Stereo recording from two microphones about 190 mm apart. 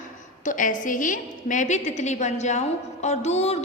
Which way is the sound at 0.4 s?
45° left (ahead or behind).